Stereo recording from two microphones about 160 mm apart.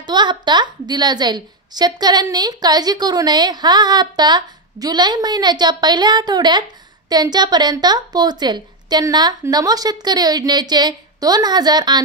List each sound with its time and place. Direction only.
0.0 s a woman's voice: 30° right (ahead or behind)